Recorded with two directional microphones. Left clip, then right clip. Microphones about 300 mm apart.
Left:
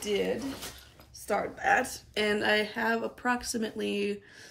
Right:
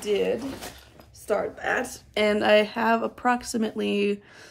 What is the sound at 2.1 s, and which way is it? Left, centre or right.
Speech, centre.